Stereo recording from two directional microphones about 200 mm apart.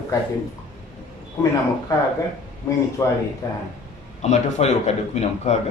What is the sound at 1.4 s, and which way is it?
A man's voice, 15° left (ahead or behind).